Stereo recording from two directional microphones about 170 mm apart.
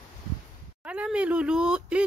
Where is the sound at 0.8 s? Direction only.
5° right (ahead or behind).